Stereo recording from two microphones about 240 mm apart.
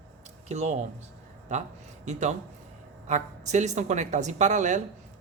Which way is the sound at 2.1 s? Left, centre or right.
Right.